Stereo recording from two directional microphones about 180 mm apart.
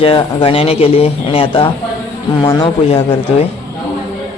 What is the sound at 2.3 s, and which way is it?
Speech, 20° left (ahead or behind).